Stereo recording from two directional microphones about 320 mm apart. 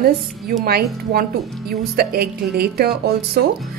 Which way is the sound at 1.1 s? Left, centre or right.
Right.